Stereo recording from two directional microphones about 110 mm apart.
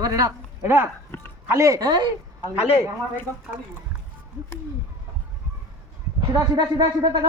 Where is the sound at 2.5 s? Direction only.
65° left (ahead or behind).